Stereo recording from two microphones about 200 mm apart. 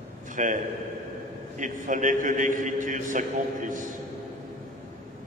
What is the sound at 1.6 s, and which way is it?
A man's voice, 40° right (ahead or behind).